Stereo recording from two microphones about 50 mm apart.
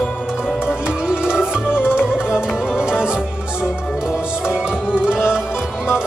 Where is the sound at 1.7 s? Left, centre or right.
Left.